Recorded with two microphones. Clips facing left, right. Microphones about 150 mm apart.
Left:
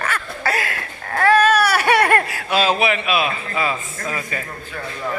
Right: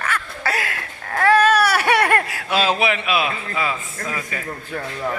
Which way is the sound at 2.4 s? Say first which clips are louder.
Left 1 dB; 20° left (ahead or behind).